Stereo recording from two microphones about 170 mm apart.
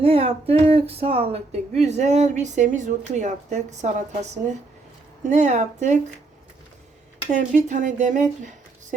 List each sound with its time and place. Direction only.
0.0 s a sound: 35° right (ahead or behind)
0.6 s speech: 35° right (ahead or behind)
7.3 s a woman's voice: 45° right (ahead or behind)